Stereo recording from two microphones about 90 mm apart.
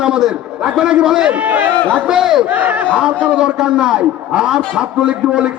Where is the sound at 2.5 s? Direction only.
20° right (ahead or behind).